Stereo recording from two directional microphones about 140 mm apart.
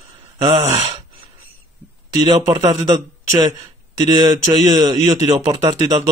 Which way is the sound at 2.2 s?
30° right (ahead or behind).